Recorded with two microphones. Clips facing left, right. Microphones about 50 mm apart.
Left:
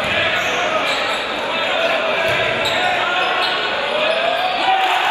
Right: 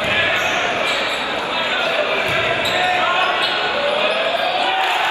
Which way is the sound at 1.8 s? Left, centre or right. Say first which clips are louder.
Left 2 dB; left.